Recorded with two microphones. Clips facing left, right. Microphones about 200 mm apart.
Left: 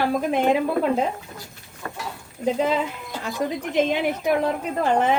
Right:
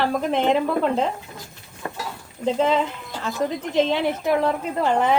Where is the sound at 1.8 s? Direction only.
25° right (ahead or behind).